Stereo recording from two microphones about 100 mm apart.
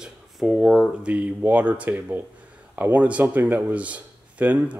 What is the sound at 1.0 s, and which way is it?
Speech, 15° right (ahead or behind).